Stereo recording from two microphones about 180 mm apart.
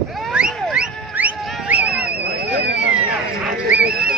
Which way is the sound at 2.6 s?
70° right (ahead or behind).